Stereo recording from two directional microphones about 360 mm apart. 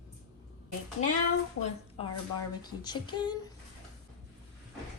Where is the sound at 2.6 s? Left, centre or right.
Centre.